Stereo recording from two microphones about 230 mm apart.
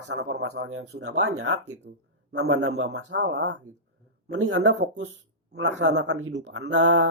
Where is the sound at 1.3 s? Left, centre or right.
Right.